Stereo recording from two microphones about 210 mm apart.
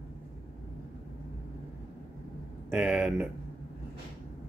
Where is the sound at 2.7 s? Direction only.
5° right (ahead or behind).